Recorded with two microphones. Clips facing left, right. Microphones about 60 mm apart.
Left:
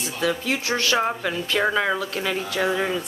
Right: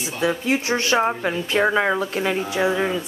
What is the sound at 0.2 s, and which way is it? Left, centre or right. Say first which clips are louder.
Speech: right 3 dB; right.